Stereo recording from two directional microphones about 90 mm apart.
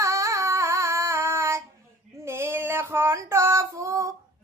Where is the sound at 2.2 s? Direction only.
30° right (ahead or behind).